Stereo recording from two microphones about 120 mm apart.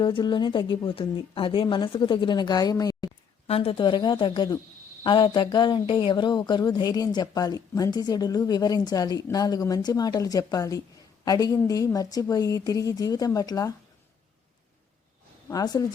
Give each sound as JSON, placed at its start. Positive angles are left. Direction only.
{"t": 0.0, "sound": "speech", "side_deg": 40}
{"t": 3.4, "sound": "speech", "side_deg": 55}
{"t": 15.4, "sound": "speech", "side_deg": 35}